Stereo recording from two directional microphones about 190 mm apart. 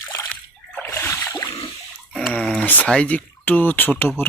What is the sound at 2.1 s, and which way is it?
Speech, 5° left (ahead or behind).